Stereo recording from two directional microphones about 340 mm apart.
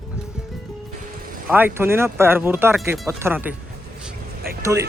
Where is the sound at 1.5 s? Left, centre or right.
Centre.